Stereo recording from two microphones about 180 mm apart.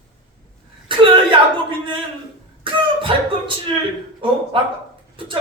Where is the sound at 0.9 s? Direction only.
30° right (ahead or behind).